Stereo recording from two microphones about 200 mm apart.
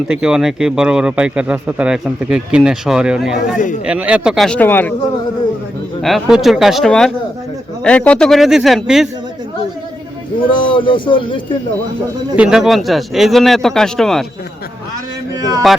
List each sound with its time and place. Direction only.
0.1 s a man's voice: 5° right (ahead or behind)
6.0 s a man's voice: centre (ahead or behind)
10.5 s speech: 25° left (ahead or behind)
12.4 s a man's voice: centre (ahead or behind)
15.4 s music: 15° right (ahead or behind)